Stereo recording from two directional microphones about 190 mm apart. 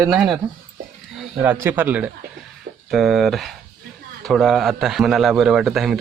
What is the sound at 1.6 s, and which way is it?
A man's voice, 10° right (ahead or behind).